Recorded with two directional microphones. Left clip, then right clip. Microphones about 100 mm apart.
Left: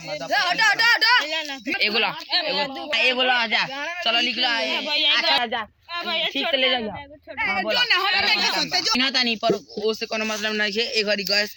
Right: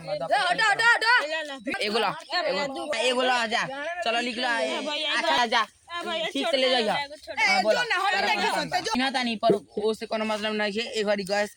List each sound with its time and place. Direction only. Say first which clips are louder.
0.1 s a sound: left 2 dB; 25° right (ahead or behind)
1.8 s a woman's voice: left 4 dB; 35° right (ahead or behind)
2.9 s a man's voice: left 4 dB; 85° right
3.5 s a woman's voice: left 4 dB; 40° right (ahead or behind); by 4.6 s 55° right (ahead or behind)
4.6 s speech: left 6 dB; 30° right (ahead or behind)
5.4 s speech: right 2 dB; 90° right
6.1 s a woman's voice: left 5 dB; 10° right (ahead or behind)
6.5 s a woman's voice: left 1 dB; 45° right (ahead or behind)
6.9 s speech: right 4 dB; 30° right (ahead or behind)